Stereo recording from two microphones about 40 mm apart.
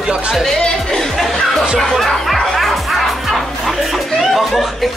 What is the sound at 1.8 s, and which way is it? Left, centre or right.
Speech, centre.